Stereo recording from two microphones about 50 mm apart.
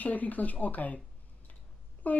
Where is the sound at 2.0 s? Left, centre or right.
Left.